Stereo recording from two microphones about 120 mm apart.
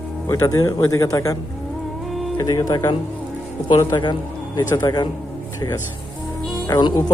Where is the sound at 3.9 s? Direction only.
40° left (ahead or behind).